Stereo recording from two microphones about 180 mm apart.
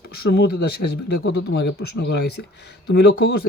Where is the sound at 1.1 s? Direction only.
75° left (ahead or behind).